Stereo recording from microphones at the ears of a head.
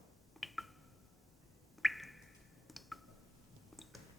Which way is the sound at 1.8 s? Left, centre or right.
Centre.